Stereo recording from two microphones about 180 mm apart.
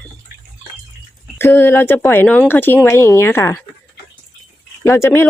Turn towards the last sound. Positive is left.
turn(degrees=15)  # may be behind; listen again after turning